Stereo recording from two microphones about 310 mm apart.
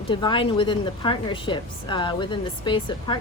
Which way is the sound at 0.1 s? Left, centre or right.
Centre.